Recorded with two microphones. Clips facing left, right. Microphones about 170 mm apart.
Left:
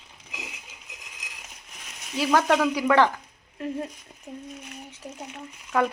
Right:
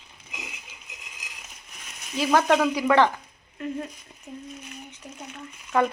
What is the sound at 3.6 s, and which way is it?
Speech, 25° left (ahead or behind).